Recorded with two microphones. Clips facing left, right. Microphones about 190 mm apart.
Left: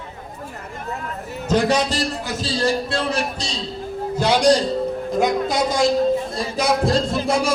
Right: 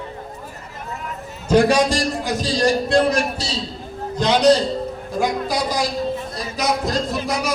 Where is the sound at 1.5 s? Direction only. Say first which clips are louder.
Right 4 dB; 10° right (ahead or behind).